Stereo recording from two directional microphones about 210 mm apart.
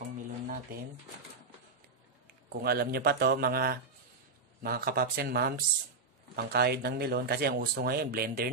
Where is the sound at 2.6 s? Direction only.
50° right (ahead or behind).